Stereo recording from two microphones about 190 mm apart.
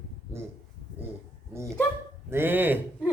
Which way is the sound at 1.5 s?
15° right (ahead or behind).